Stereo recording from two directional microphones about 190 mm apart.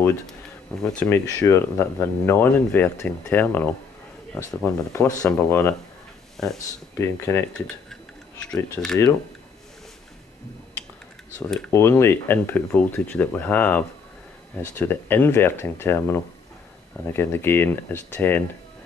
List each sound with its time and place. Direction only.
0.9 s speech: 15° left (ahead or behind)
6.3 s speech: centre (ahead or behind)
7.0 s speech: 15° left (ahead or behind)
7.5 s a sound: 5° left (ahead or behind)
11.3 s speech: 10° left (ahead or behind)